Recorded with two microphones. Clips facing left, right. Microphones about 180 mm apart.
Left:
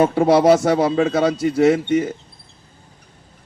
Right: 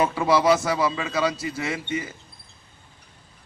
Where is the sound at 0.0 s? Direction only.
50° left (ahead or behind).